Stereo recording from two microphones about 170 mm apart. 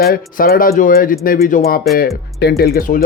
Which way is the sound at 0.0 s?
60° left (ahead or behind).